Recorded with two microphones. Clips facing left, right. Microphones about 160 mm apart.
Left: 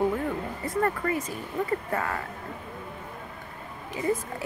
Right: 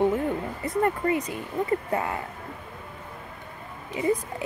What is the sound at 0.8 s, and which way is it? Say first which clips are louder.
Speech: right 4 dB; 20° right (ahead or behind).